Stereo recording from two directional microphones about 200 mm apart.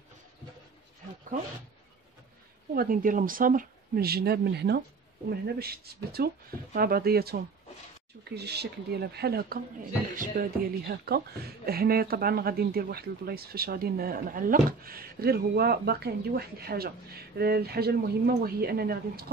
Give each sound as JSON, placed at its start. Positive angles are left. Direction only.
{"t": 2.7, "sound": "speech", "side_deg": -45}